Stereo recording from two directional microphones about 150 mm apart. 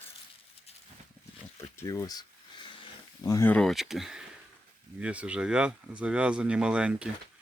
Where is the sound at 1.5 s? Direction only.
20° left (ahead or behind).